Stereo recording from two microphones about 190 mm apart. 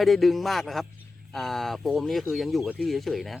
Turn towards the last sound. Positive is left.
turn(degrees=0)  # may be behind; listen again after turning